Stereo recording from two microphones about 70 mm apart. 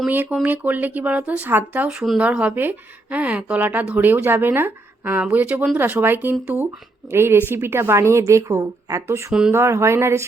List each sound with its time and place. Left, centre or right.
0.1 s speech: right
5.2 s speech: right